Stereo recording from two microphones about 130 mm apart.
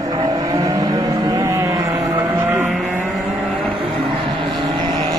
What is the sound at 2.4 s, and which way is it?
Vehicle, 15° right (ahead or behind).